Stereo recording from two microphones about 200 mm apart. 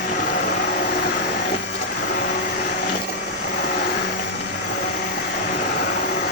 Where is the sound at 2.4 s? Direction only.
55° left (ahead or behind).